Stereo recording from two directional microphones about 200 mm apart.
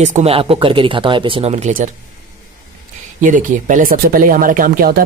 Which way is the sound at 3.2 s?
40° right (ahead or behind).